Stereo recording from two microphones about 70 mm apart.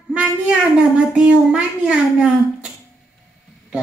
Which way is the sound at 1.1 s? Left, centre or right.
Centre.